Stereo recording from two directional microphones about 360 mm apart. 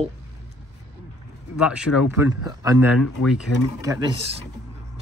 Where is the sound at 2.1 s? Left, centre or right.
Centre.